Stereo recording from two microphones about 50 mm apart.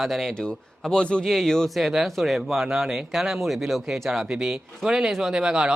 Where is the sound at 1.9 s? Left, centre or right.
Centre.